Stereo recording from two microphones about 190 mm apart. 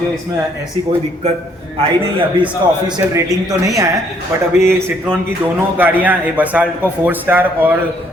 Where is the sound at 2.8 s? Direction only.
20° right (ahead or behind).